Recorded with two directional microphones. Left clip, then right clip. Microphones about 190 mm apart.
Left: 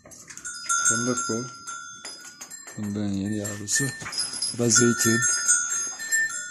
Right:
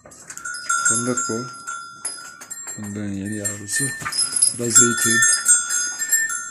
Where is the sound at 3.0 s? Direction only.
20° left (ahead or behind).